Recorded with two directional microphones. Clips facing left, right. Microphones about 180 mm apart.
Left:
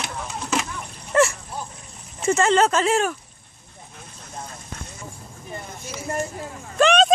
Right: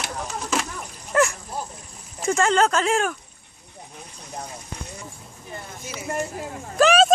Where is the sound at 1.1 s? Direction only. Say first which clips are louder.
Left 2 dB; centre (ahead or behind).